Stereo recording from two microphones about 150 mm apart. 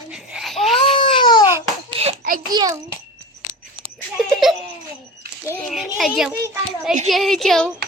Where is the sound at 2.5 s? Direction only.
25° right (ahead or behind).